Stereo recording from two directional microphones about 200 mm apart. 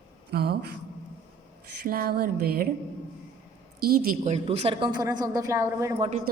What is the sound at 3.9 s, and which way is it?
Speech, 45° right (ahead or behind).